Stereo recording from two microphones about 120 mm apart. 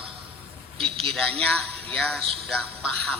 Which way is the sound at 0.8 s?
50° right (ahead or behind).